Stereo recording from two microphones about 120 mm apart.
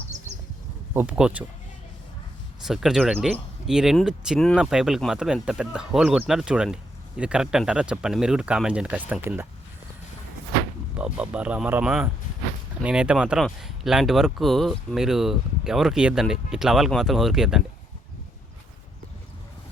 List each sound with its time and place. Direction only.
0.9 s speech: 10° right (ahead or behind)
2.6 s speech: 5° right (ahead or behind)
10.9 s speech: 10° right (ahead or behind)